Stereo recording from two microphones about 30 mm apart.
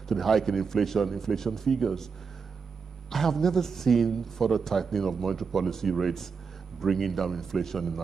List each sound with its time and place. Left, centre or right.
0.1 s a man's voice: centre
3.1 s a man's voice: centre